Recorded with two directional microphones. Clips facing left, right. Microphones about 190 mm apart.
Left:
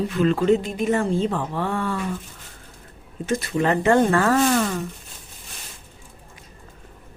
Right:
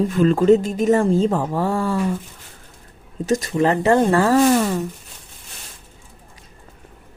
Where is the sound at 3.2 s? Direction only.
40° right (ahead or behind).